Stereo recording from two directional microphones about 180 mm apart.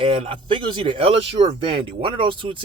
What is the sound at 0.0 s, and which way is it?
Speech, 30° right (ahead or behind).